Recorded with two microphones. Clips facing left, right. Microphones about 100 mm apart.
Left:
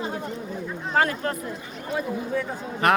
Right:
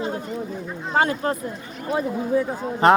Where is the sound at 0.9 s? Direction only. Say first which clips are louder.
Right 2 dB; 25° right (ahead or behind).